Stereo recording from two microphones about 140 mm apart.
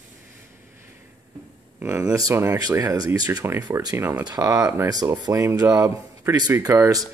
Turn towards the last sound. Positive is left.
turn(degrees=-20)  # may be behind; listen again after turning